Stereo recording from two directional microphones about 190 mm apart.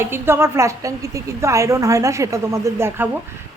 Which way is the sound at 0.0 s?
15° right (ahead or behind).